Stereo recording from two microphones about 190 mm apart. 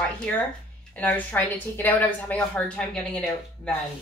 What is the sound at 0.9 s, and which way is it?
A woman's voice, 10° left (ahead or behind).